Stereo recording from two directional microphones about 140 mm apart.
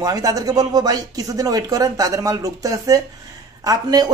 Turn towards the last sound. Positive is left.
turn(degrees=-25)  # may be behind; listen again after turning